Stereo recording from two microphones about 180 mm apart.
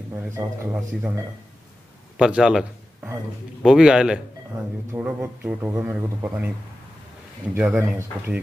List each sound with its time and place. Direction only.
0.1 s a man's voice: 15° right (ahead or behind)
2.1 s a sound: 5° right (ahead or behind)
3.6 s a man's voice: 5° right (ahead or behind)